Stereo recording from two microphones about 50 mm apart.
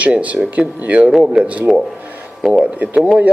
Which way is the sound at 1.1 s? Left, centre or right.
Centre.